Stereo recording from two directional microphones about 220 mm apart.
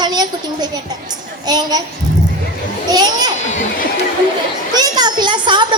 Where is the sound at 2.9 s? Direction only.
20° right (ahead or behind).